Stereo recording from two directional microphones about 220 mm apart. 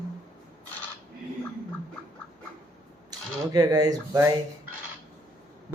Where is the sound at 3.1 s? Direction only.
15° right (ahead or behind).